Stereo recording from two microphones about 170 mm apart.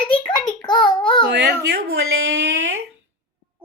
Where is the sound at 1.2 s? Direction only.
80° right.